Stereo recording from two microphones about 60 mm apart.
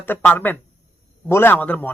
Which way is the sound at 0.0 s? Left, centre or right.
Left.